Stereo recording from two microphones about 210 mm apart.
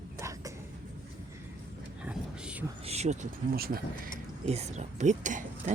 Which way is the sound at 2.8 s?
30° right (ahead or behind).